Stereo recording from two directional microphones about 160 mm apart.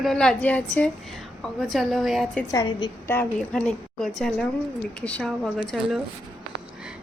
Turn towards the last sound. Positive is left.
turn(degrees=0)  # may be behind; listen again after turning